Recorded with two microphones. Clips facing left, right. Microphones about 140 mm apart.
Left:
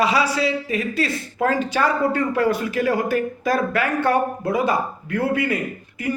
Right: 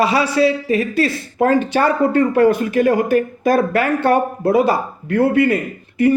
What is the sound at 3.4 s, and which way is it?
A man's voice, 25° right (ahead or behind).